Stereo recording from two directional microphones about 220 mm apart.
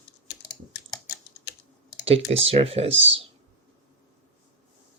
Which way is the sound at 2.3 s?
25° right (ahead or behind).